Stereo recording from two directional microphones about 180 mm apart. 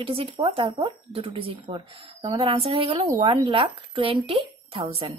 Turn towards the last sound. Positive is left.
turn(degrees=-30)  # may be behind; listen again after turning